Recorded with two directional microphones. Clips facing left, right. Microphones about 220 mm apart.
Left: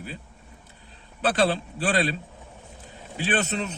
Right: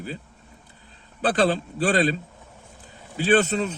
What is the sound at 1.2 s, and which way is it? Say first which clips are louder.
Speech: right 2 dB; 40° right (ahead or behind).